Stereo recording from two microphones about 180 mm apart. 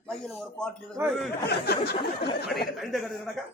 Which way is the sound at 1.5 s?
60° left (ahead or behind).